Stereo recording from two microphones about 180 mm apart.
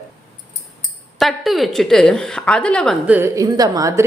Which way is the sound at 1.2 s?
Centre (ahead or behind).